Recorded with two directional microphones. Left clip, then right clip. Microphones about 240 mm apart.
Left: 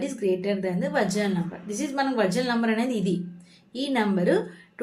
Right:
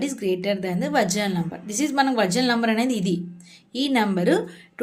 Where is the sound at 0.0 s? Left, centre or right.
Right.